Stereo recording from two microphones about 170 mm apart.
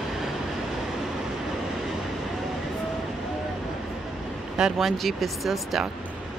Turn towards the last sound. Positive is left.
turn(degrees=0)  # may be behind; listen again after turning